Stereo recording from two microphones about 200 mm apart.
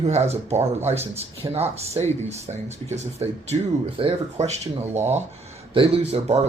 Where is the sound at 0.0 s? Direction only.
35° right (ahead or behind).